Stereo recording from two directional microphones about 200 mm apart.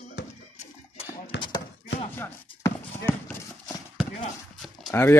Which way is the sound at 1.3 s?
60° left (ahead or behind).